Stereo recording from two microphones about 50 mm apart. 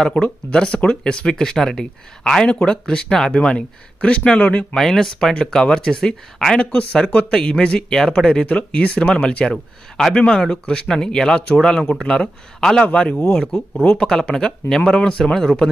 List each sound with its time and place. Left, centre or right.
0.0 s speech: centre
4.7 s speech: centre
6.6 s speech: left
12.8 s speech: left
13.9 s speech: centre